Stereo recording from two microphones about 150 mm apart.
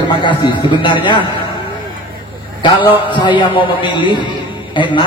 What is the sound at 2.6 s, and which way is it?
A man's voice, 30° left (ahead or behind).